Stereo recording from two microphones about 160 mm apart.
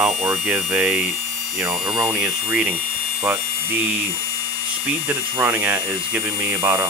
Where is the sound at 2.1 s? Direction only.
10° right (ahead or behind).